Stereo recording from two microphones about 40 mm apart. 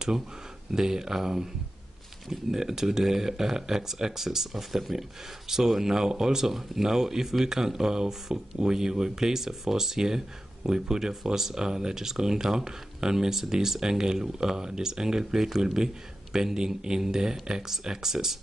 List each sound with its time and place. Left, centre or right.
0.7 s speech: centre